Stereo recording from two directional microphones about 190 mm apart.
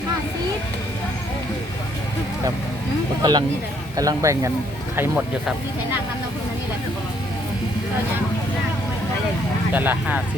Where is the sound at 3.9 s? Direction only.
20° right (ahead or behind).